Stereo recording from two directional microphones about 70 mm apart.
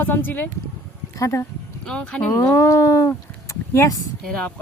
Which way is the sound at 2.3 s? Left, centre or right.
Left.